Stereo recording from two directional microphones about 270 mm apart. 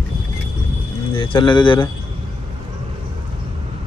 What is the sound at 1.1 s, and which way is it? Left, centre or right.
Speech, centre.